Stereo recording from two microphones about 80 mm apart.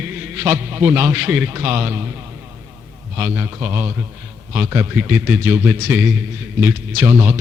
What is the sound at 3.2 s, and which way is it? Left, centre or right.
A man's voice, right.